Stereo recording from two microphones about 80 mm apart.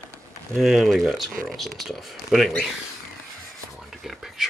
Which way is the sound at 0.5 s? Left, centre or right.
Centre.